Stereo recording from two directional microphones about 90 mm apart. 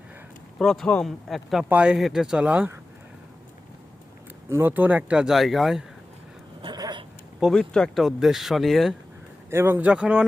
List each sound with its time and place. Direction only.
0.6 s speech: 5° left (ahead or behind)
1.7 s speech: 10° right (ahead or behind)
4.4 s speech: 30° right (ahead or behind)
4.7 s speech: 20° right (ahead or behind); by 5.8 s 5° right (ahead or behind)
6.7 s cat: 45° right (ahead or behind)
7.3 s speech: 5° left (ahead or behind)
9.5 s speech: 25° right (ahead or behind)
9.9 s speech: 10° right (ahead or behind)